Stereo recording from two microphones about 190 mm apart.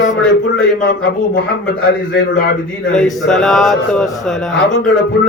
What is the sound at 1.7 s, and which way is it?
Speech, 65° left (ahead or behind).